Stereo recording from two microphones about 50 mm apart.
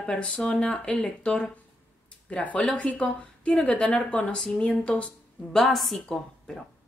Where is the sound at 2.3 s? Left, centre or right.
Left.